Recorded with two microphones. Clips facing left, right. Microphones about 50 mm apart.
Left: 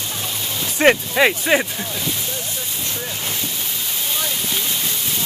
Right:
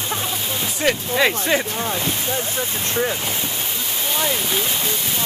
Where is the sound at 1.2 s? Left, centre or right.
Centre.